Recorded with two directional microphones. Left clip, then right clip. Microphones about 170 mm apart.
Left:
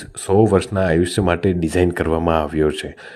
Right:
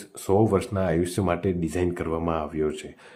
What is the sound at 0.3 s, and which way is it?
Speech, 25° left (ahead or behind).